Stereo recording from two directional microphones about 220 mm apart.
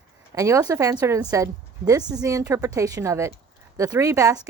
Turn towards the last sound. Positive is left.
turn(degrees=-15)  # may be behind; listen again after turning